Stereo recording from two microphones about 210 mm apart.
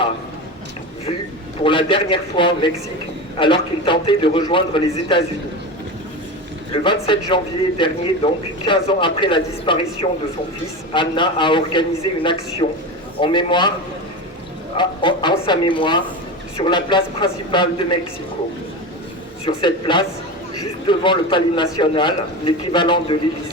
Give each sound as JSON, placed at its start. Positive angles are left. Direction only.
{"t": 1.6, "sound": "a man's voice", "side_deg": 25}
{"t": 6.8, "sound": "a man's voice", "side_deg": 25}
{"t": 14.8, "sound": "a man's voice", "side_deg": 20}
{"t": 19.5, "sound": "a man's voice", "side_deg": 25}